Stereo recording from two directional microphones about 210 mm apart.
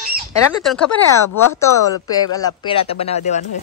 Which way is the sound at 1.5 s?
15° left (ahead or behind).